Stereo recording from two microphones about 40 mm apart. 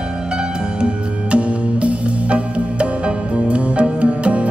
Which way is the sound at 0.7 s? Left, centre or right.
Right.